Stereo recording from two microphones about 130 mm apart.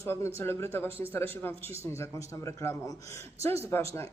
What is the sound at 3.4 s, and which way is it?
Speech, 50° right (ahead or behind).